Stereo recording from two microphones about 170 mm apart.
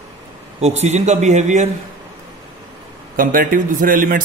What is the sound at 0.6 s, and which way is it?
A man's voice, 40° right (ahead or behind).